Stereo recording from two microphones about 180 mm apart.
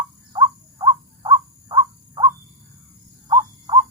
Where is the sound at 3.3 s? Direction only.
25° right (ahead or behind).